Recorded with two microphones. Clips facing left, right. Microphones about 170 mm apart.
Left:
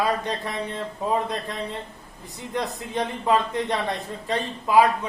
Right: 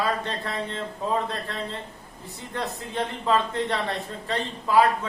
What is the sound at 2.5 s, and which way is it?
Speech, 15° left (ahead or behind).